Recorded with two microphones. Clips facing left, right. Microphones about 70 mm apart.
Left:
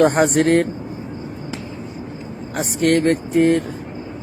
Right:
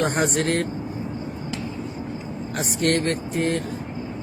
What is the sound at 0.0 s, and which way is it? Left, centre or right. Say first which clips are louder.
Speech: left 8 dB; left.